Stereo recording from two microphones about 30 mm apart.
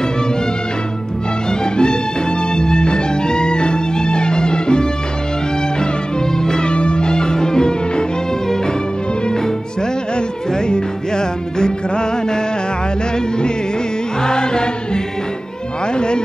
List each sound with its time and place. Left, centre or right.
1.5 s music: left
6.3 s music: centre
6.6 s music: left
10.7 s music: left
14.2 s music: left
15.9 s music: left